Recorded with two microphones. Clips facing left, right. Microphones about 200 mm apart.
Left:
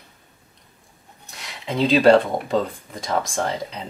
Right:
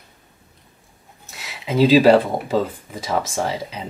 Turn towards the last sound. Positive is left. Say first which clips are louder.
# right 1 dB
turn(degrees=-5)  # may be behind; listen again after turning